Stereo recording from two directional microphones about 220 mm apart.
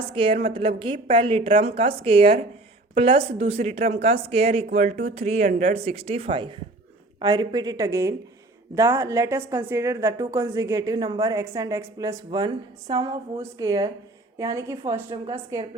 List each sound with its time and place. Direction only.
0.0 s a woman's voice: 25° right (ahead or behind)